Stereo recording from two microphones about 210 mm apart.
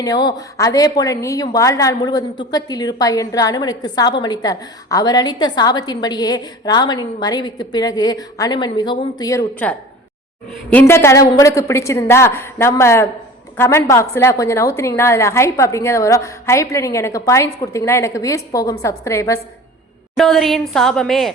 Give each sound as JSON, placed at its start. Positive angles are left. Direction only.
{"t": 0.0, "sound": "a woman's voice", "side_deg": 20}
{"t": 20.1, "sound": "a woman's voice", "side_deg": 0}